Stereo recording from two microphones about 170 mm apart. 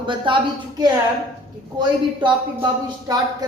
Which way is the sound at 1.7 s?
30° right (ahead or behind).